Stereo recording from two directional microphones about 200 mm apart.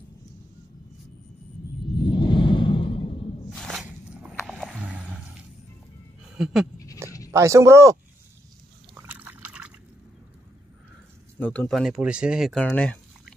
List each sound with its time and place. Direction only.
2.0 s a sound: 25° left (ahead or behind)
3.4 s music: centre (ahead or behind)
6.3 s pant: centre (ahead or behind)
7.2 s speech: 15° right (ahead or behind)
8.9 s a sound: 10° right (ahead or behind)
11.3 s speech: 10° left (ahead or behind)
11.8 s speech: 5° right (ahead or behind)